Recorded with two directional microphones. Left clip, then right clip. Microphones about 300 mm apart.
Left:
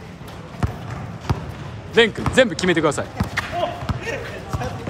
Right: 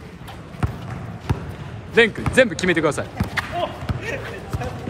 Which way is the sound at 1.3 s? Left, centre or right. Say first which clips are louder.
Left 1 dB; centre.